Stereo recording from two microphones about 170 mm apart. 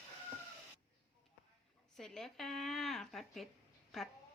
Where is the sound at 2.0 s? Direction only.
5° left (ahead or behind).